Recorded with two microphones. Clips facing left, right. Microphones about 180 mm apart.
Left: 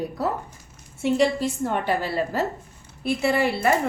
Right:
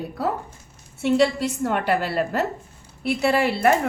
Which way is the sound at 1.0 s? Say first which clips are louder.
Right 1 dB; 70° right (ahead or behind).